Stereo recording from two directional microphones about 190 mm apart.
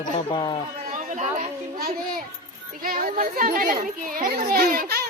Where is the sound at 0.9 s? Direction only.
40° right (ahead or behind).